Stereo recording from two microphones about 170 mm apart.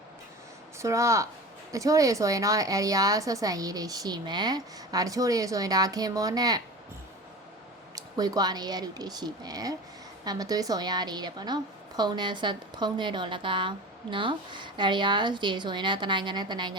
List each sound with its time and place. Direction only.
0.8 s a woman's voice: 15° right (ahead or behind)
7.9 s a woman's voice: 20° right (ahead or behind)